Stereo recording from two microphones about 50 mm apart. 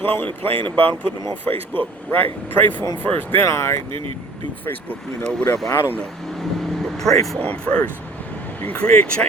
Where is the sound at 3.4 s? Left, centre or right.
Left.